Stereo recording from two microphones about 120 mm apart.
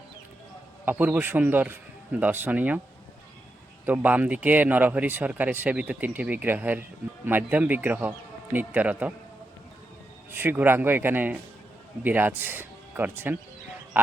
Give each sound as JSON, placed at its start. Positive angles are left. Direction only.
{"t": 0.9, "sound": "speech", "side_deg": -15}
{"t": 3.8, "sound": "speech", "side_deg": -15}
{"t": 10.3, "sound": "speech", "side_deg": -15}